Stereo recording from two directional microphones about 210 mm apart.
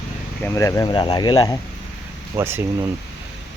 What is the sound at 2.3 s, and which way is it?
Speech, 10° right (ahead or behind).